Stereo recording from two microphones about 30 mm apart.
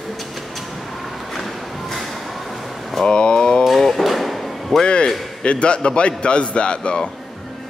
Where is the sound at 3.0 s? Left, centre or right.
Left.